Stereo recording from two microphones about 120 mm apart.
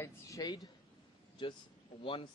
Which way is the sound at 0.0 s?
30° left (ahead or behind).